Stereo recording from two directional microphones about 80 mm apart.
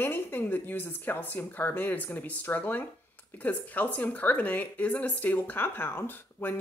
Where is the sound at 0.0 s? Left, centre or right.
Left.